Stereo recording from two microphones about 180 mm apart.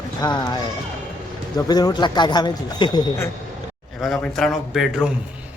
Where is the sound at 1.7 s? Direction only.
20° left (ahead or behind).